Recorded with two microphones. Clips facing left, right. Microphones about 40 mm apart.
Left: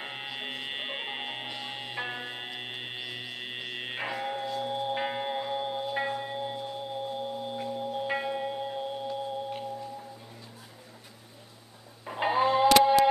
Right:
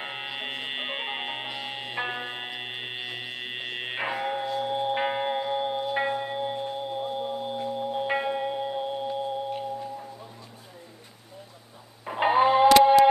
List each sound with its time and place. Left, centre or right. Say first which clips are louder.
0.0 s music: right 3 dB; centre
7.5 s singing bowl: right 4 dB; centre
9.5 s music: right 4 dB; centre
12.0 s music: right 5 dB; centre